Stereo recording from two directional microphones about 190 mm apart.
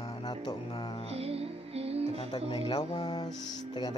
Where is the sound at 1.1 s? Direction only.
30° right (ahead or behind).